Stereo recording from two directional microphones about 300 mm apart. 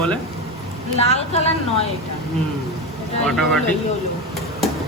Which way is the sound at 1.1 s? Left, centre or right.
Centre.